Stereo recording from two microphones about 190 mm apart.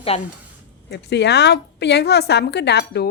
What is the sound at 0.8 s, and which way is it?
A woman's voice, 65° left (ahead or behind).